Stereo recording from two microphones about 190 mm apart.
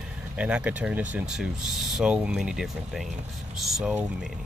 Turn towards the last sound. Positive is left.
turn(degrees=-5)  # may be behind; listen again after turning